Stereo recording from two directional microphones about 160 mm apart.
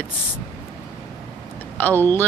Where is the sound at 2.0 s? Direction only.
10° left (ahead or behind).